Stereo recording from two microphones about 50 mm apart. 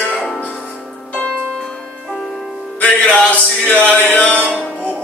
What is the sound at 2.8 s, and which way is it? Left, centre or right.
Music, left.